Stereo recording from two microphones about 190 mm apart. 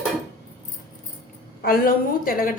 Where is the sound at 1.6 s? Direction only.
50° left (ahead or behind).